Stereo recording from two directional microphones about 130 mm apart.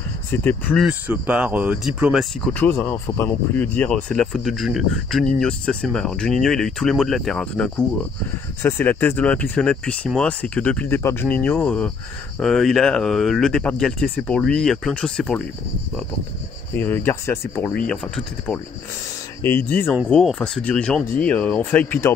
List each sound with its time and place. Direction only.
0.3 s speech: 15° left (ahead or behind)
0.8 s speech: 10° right (ahead or behind)
2.4 s speech: 15° left (ahead or behind)
12.4 s speech: centre (ahead or behind)
16.7 s speech: 15° left (ahead or behind)
17.7 s speech: 5° left (ahead or behind)
19.4 s speech: 15° left (ahead or behind)
20.1 s speech: 5° left (ahead or behind)